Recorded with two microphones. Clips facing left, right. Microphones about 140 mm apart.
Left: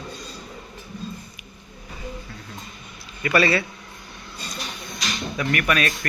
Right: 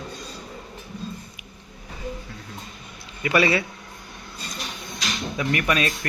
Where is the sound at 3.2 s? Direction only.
15° right (ahead or behind).